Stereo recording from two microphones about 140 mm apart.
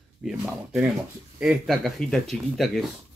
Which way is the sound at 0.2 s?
5° right (ahead or behind).